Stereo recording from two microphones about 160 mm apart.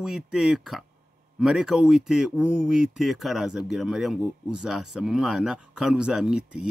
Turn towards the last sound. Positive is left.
turn(degrees=-5)  # may be behind; listen again after turning